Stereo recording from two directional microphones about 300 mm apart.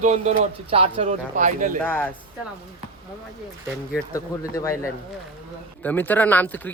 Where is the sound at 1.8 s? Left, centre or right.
Centre.